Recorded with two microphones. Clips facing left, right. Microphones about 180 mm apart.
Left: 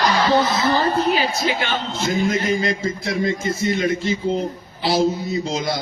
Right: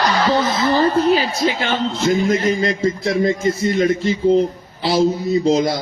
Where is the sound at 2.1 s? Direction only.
40° right (ahead or behind).